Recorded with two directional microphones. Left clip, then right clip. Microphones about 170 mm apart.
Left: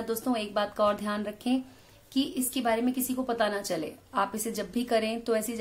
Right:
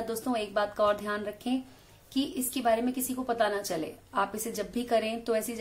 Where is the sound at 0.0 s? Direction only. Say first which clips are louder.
Left 1 dB; 5° left (ahead or behind).